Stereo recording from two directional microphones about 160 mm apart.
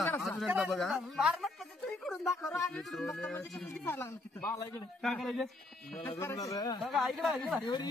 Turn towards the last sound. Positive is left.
turn(degrees=30)  # may be behind; listen again after turning